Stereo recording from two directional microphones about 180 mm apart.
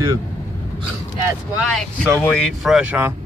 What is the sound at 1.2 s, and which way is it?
A woman's voice, 10° right (ahead or behind).